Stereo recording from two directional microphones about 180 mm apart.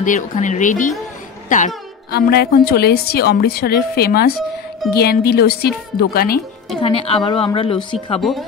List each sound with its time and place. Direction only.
0.0 s speech: 45° left (ahead or behind)
2.0 s a woman's voice: 60° left (ahead or behind)
6.8 s a woman's voice: 30° left (ahead or behind)
8.2 s speech: centre (ahead or behind)